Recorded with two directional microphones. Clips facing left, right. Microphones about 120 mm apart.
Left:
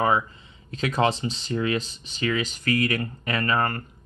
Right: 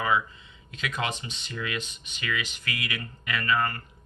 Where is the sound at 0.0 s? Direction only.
40° left (ahead or behind).